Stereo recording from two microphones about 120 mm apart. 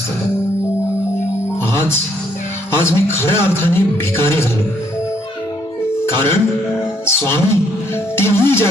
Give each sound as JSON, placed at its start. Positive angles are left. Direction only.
{"t": 1.7, "sound": "music", "side_deg": 20}
{"t": 2.7, "sound": "a man's voice", "side_deg": 20}
{"t": 5.9, "sound": "music", "side_deg": 20}
{"t": 7.0, "sound": "a man's voice", "side_deg": 20}